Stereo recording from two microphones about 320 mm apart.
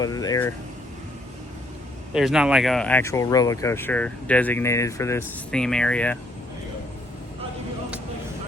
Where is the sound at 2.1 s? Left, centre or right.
Centre.